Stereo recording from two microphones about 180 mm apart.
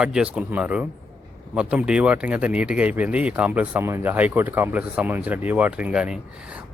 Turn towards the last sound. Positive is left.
turn(degrees=-5)  # may be behind; listen again after turning